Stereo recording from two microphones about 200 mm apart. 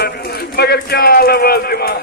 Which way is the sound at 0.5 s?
50° left (ahead or behind).